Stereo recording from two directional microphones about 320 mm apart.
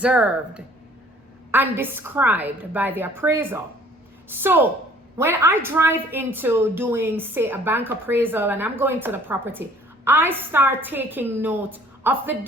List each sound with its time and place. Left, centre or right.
0.0 s a woman's voice: centre